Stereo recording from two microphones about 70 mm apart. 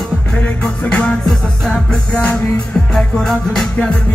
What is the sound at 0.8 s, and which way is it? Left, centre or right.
Music, centre.